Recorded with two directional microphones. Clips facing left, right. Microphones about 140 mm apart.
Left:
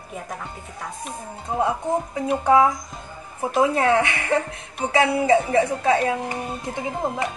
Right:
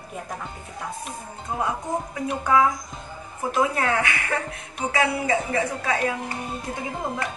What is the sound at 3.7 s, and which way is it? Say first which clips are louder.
A woman's voice: left 5 dB; 25° left (ahead or behind).